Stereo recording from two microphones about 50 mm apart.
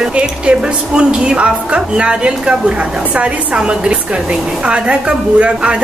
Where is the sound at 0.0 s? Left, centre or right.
Right.